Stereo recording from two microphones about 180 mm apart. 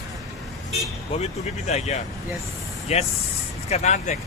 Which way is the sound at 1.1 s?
40° left (ahead or behind).